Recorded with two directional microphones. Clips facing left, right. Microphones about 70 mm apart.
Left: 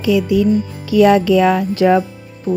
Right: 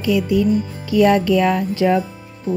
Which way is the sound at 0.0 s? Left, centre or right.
Left.